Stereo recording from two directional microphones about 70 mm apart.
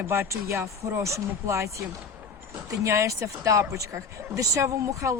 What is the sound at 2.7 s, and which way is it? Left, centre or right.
Speech, right.